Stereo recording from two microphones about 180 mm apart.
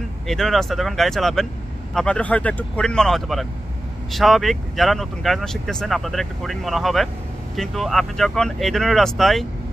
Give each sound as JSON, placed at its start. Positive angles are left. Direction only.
{"t": 0.3, "sound": "speech", "side_deg": 0}